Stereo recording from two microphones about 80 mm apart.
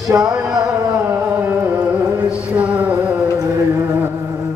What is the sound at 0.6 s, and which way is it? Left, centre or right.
Carnatic music, centre.